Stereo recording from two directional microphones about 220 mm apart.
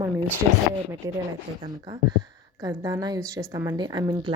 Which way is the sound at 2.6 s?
15° right (ahead or behind).